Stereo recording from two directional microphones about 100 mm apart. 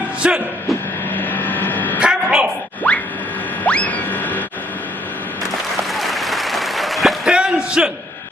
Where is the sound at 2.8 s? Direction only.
15° left (ahead or behind).